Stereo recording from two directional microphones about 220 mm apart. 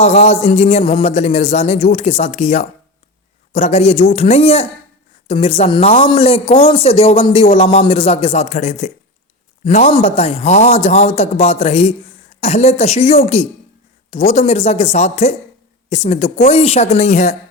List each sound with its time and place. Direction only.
0.0 s a man's voice: 30° left (ahead or behind)